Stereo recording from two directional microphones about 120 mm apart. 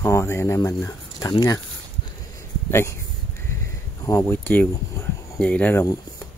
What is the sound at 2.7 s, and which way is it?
Speech, 20° left (ahead or behind).